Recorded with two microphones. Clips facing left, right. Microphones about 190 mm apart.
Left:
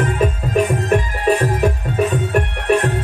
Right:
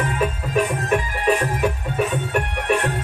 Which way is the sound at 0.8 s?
40° left (ahead or behind).